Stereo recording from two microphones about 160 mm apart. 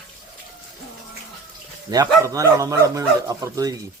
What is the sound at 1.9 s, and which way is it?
Speech, 20° right (ahead or behind).